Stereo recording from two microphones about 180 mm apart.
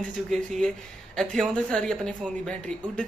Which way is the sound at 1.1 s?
5° left (ahead or behind).